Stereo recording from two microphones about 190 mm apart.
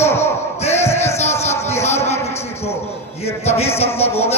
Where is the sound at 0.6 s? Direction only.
35° left (ahead or behind).